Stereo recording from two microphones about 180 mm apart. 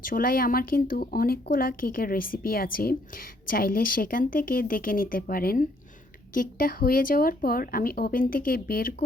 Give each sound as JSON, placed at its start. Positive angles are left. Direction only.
{"t": 0.0, "sound": "speech", "side_deg": 50}